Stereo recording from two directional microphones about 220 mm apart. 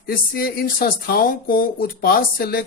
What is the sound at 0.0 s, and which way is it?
Speech, 40° left (ahead or behind).